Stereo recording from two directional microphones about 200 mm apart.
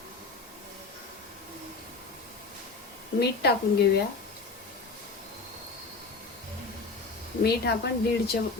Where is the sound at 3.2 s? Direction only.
55° left (ahead or behind).